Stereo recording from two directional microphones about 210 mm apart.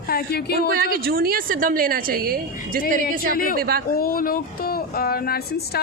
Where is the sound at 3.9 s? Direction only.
45° left (ahead or behind).